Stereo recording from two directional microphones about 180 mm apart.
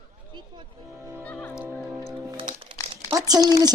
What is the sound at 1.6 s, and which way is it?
Music, 10° right (ahead or behind).